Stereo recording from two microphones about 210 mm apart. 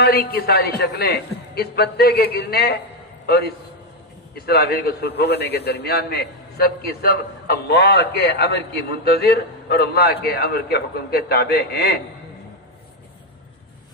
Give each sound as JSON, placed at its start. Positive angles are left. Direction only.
{"t": 0.0, "sound": "a man's voice", "side_deg": 50}